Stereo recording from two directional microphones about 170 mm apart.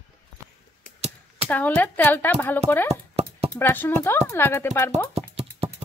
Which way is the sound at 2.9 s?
40° right (ahead or behind).